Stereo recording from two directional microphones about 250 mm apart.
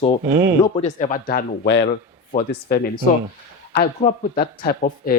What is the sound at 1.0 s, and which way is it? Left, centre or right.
Speech, left.